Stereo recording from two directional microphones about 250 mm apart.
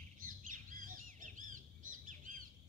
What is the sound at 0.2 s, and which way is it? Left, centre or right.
Bird, right.